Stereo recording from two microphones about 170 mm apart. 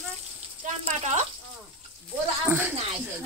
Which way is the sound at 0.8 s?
40° right (ahead or behind).